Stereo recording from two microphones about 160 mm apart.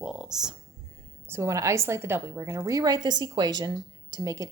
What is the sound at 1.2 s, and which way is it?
A woman's voice, 15° right (ahead or behind).